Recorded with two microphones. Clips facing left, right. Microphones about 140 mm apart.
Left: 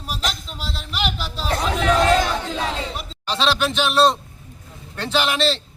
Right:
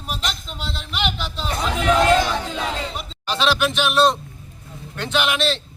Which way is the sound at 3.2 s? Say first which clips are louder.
Even; 30° left (ahead or behind).